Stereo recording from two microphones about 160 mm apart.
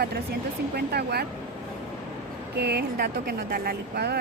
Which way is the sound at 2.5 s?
90° right.